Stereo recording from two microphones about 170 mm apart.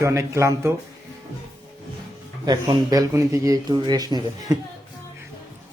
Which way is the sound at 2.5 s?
20° right (ahead or behind).